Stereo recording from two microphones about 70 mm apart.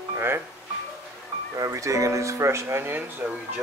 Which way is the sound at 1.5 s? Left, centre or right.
Right.